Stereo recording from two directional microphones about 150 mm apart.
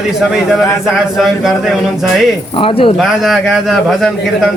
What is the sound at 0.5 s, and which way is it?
Speech, centre (ahead or behind).